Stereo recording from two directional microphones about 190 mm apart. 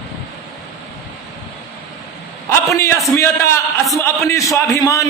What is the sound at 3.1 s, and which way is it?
A man's voice, 15° left (ahead or behind).